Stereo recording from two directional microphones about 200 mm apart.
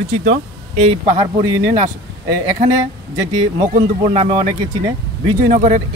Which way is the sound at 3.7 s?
40° right (ahead or behind).